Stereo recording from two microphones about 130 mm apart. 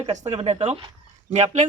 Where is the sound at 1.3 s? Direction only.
65° right (ahead or behind).